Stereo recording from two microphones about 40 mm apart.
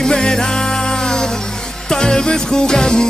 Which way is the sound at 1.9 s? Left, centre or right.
Centre.